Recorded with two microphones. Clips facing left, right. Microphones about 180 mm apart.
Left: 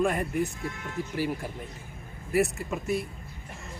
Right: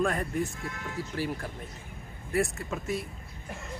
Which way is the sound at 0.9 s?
10° left (ahead or behind).